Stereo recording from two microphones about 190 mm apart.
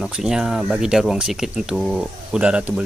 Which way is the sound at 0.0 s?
Centre (ahead or behind).